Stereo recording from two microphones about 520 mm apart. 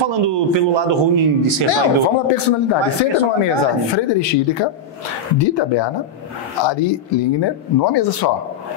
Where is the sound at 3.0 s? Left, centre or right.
Left.